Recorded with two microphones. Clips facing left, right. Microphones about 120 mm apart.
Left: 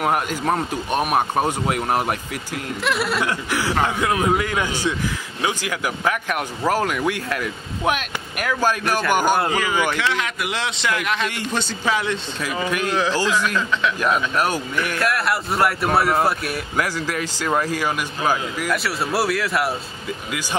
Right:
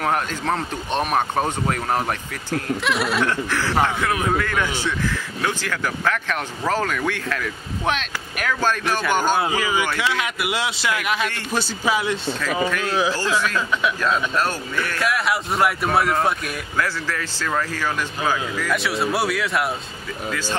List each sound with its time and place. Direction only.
0.0 s speech: 10° left (ahead or behind)
9.4 s a man's voice: 10° right (ahead or behind)
12.6 s speech: 15° left (ahead or behind)
12.9 s a man's voice: 10° right (ahead or behind)
14.0 s speech: 15° left (ahead or behind)
15.0 s speech: centre (ahead or behind)
16.7 s speech: 15° left (ahead or behind)
18.7 s speech: centre (ahead or behind)